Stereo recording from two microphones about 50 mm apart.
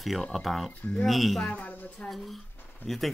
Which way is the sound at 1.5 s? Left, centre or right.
Left.